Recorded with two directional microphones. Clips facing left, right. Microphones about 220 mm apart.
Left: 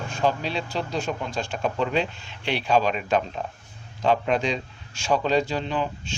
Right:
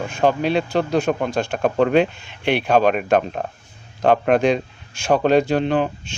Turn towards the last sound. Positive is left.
turn(degrees=-60)  # may be behind; listen again after turning